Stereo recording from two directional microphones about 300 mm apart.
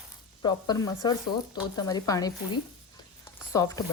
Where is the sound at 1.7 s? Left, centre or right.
Centre.